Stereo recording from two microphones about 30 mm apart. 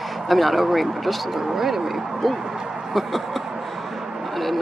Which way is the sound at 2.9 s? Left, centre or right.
Centre.